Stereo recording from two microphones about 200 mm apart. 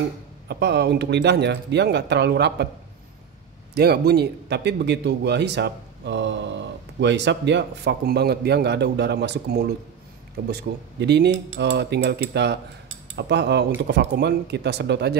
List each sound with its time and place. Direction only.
0.5 s a man's voice: 60° right (ahead or behind)
3.7 s a man's voice: 55° right (ahead or behind)